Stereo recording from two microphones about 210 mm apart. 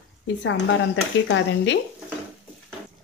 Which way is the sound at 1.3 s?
60° left (ahead or behind).